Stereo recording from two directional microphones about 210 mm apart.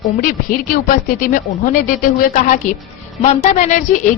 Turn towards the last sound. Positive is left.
turn(degrees=35)  # may be behind; listen again after turning